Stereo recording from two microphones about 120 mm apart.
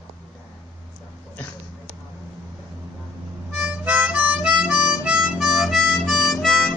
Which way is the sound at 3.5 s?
10° right (ahead or behind).